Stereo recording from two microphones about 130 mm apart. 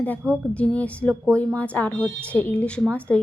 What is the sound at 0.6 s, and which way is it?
A woman's voice, 10° left (ahead or behind).